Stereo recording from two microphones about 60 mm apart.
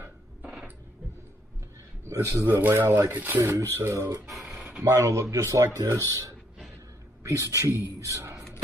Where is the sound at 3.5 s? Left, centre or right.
Right.